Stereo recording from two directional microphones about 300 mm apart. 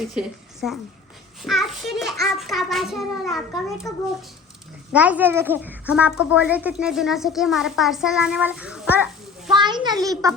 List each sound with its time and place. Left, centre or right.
0.1 s a woman's voice: centre
4.9 s a child's voice: centre
9.5 s a child's voice: centre